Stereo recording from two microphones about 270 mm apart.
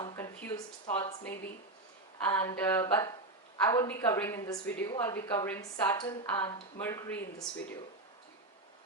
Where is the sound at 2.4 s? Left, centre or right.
Centre.